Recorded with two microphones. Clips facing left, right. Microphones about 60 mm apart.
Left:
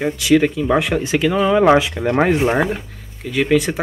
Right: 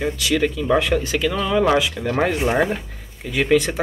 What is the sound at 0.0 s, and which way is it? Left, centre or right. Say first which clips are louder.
Speech: left 5 dB; centre.